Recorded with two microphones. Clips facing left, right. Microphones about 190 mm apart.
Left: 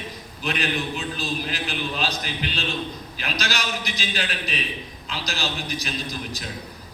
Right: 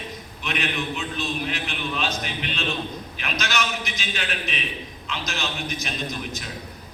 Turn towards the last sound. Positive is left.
turn(degrees=35)  # may be behind; listen again after turning